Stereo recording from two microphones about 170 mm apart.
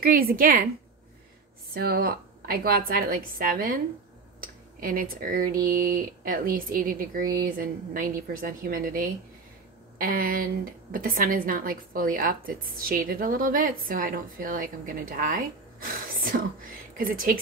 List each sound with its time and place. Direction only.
0.0 s a woman's voice: 60° right (ahead or behind)
1.7 s a woman's voice: 65° right (ahead or behind)